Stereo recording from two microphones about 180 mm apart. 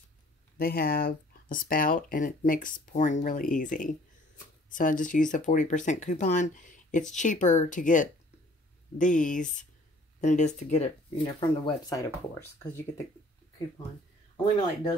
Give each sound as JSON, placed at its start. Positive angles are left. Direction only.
{"t": 0.6, "sound": "speech", "side_deg": 55}
{"t": 11.6, "sound": "speech", "side_deg": 20}
{"t": 14.3, "sound": "speech", "side_deg": 25}